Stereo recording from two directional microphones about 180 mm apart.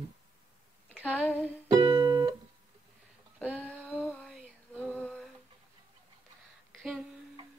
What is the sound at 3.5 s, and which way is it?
Female singing, 5° left (ahead or behind).